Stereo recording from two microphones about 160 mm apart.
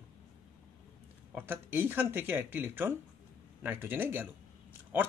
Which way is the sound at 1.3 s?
10° right (ahead or behind).